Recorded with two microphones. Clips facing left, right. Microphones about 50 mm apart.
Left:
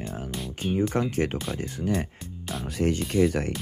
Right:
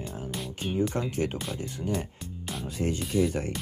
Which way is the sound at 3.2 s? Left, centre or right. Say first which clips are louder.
Left 4 dB; left.